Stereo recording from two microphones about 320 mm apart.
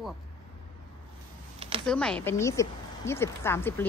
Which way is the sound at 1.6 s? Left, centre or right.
Centre.